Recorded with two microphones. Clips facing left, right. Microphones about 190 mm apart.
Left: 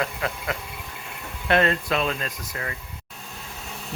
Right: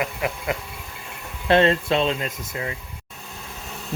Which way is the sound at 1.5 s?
25° right (ahead or behind).